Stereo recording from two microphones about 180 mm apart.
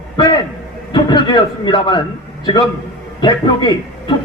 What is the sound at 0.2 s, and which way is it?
A man's voice, 25° left (ahead or behind).